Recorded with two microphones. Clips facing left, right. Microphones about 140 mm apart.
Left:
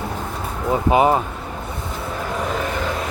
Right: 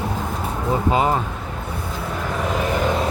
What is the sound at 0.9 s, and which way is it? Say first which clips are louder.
Speech: left 4 dB; 20° left (ahead or behind).